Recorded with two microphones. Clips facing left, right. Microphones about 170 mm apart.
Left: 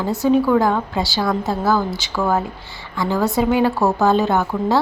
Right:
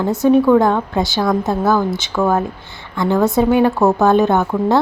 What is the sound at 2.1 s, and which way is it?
Speech, centre (ahead or behind).